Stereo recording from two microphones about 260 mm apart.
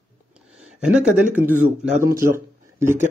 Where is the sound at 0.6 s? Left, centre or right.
Centre.